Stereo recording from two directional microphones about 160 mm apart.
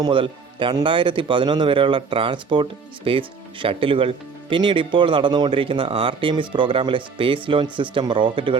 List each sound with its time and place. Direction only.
0.0 s speech: 30° right (ahead or behind)